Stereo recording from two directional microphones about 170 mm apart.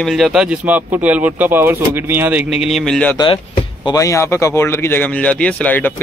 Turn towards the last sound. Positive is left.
turn(degrees=10)  # may be behind; listen again after turning